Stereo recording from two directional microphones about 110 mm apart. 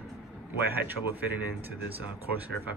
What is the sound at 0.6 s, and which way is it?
Speech, 20° right (ahead or behind).